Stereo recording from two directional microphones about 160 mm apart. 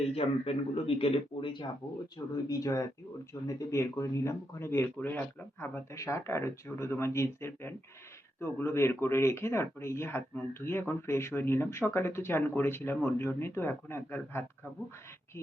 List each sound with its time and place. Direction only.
0.1 s speech: 35° left (ahead or behind); by 14.4 s 15° left (ahead or behind)